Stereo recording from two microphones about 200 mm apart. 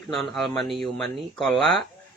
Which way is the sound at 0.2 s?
Centre (ahead or behind).